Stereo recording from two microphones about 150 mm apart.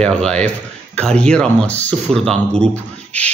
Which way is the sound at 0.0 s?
5° left (ahead or behind).